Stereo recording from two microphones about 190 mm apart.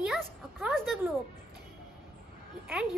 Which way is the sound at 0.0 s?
5° right (ahead or behind).